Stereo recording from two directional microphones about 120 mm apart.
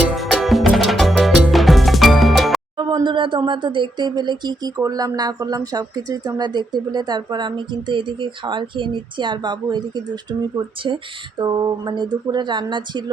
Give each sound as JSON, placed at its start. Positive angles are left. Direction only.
{"t": 0.2, "sound": "music", "side_deg": 0}
{"t": 2.7, "sound": "speech", "side_deg": -40}